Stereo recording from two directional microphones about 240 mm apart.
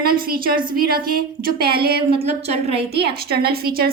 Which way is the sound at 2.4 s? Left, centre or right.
Right.